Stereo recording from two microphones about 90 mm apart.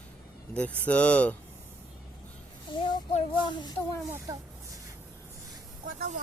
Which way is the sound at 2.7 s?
60° left (ahead or behind).